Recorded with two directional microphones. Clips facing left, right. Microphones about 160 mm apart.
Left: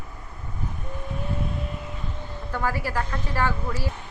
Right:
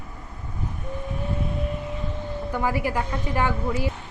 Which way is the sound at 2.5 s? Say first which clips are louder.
Right 2 dB; 15° right (ahead or behind).